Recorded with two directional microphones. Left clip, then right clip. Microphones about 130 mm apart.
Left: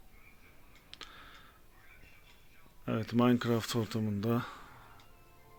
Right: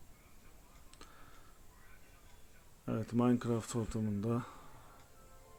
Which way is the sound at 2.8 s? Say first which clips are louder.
Left 4 dB; 15° left (ahead or behind).